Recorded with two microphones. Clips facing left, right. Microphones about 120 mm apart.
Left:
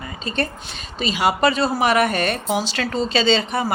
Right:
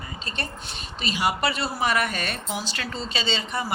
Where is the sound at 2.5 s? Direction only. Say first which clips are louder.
Left 9 dB; 90° left.